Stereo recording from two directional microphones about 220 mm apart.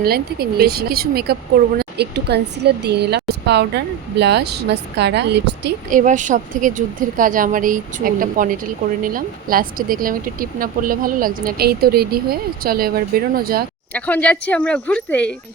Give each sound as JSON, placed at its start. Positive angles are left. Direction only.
{"t": 0.0, "sound": "speech", "side_deg": -45}
{"t": 5.9, "sound": "speech", "side_deg": -35}
{"t": 13.9, "sound": "speech", "side_deg": 5}